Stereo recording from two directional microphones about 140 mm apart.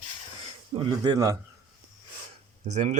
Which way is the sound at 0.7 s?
30° right (ahead or behind).